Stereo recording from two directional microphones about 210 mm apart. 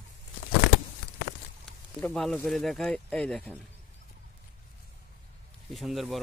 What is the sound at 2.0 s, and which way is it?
Speech, 5° left (ahead or behind).